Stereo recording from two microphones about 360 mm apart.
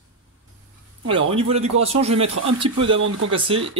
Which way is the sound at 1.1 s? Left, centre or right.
Centre.